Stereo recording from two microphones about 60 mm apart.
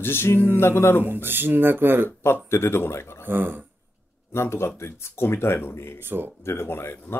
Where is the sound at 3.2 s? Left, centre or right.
Right.